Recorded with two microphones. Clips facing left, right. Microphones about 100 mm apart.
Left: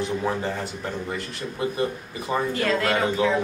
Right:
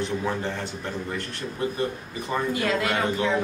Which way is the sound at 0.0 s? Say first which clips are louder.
Left 2 dB; 5° left (ahead or behind).